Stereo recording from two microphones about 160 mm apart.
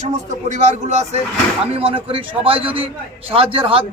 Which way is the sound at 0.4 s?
50° right (ahead or behind).